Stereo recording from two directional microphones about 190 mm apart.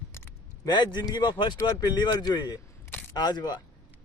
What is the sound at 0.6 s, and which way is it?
A man's voice, 20° left (ahead or behind).